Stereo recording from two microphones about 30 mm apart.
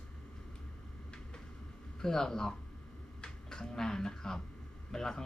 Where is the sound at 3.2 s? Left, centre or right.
Left.